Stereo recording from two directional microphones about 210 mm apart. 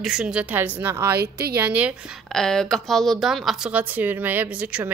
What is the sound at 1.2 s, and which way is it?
Speech, 50° right (ahead or behind).